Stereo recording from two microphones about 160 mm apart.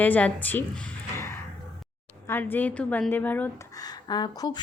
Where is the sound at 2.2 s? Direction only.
15° left (ahead or behind).